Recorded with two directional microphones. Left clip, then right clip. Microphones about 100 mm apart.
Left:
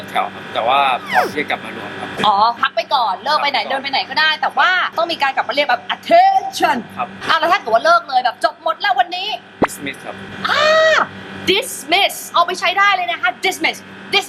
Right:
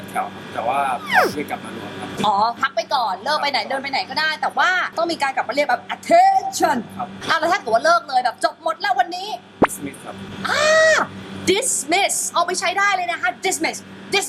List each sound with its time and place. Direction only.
0.1 s speech: 15° left (ahead or behind)
1.0 s speech: centre (ahead or behind)
1.4 s speech: 15° left (ahead or behind)
2.2 s a woman's voice: 10° right (ahead or behind)